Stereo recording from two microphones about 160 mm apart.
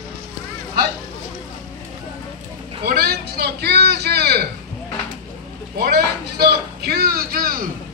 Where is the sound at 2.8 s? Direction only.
80° right.